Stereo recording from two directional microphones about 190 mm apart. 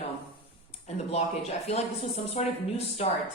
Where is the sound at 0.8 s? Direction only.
35° left (ahead or behind).